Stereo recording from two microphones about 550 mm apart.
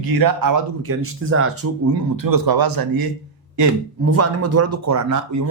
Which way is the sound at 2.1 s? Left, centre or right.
Right.